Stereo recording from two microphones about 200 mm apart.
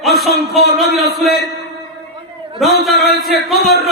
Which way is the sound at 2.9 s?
55° left (ahead or behind).